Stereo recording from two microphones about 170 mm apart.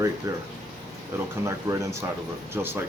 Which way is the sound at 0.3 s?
20° right (ahead or behind).